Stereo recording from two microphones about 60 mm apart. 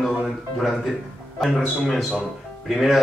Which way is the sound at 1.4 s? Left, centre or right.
Centre.